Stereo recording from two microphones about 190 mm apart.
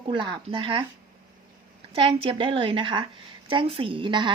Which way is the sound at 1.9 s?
30° right (ahead or behind).